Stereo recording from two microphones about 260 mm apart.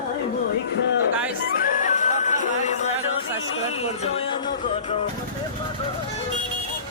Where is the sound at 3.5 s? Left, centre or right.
Left.